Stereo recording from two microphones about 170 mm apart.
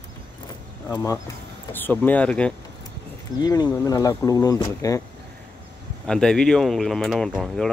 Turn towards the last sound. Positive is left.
turn(degrees=0)  # may be behind; listen again after turning